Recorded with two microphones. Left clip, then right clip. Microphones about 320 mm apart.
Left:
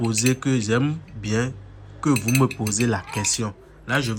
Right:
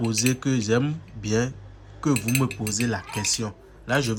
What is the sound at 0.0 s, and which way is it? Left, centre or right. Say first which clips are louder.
Speech: left 2 dB; centre.